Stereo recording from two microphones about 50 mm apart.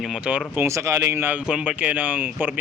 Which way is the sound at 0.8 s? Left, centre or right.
Right.